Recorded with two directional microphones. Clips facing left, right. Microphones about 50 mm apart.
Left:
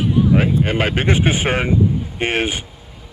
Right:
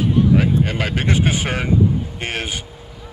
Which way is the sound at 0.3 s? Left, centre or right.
Left.